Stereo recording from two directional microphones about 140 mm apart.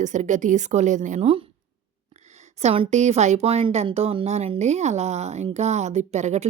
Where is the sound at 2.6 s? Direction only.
45° right (ahead or behind).